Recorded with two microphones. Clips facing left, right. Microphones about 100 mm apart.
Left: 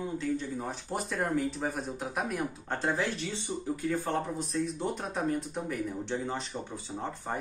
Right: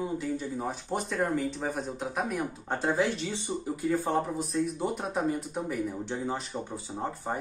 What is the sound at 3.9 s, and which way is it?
Speech, 10° right (ahead or behind).